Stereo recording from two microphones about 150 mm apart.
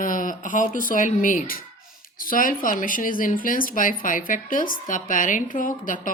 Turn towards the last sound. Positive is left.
turn(degrees=65)  # may be behind; listen again after turning